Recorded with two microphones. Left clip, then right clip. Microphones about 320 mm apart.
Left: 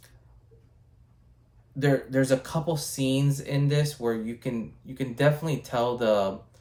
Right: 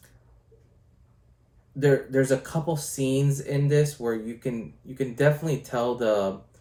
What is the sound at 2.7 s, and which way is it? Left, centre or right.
Speech, centre.